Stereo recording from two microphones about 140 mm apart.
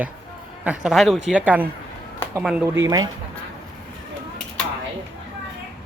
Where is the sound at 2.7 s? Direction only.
25° right (ahead or behind).